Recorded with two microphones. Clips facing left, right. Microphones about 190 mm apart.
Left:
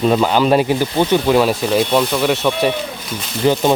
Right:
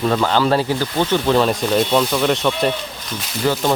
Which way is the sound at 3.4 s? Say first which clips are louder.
Left 4 dB; 20° left (ahead or behind).